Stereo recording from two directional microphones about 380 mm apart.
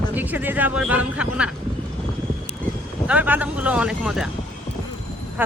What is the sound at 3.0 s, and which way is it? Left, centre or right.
Speech, centre.